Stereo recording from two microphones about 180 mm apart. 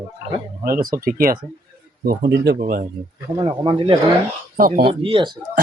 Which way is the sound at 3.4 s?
25° right (ahead or behind).